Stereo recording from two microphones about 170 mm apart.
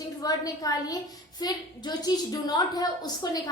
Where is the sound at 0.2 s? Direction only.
20° left (ahead or behind).